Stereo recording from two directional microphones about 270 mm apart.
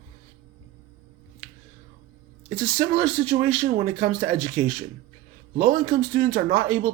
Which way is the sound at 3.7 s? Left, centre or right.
Right.